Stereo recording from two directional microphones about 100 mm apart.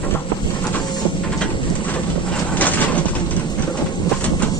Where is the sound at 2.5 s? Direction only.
15° left (ahead or behind).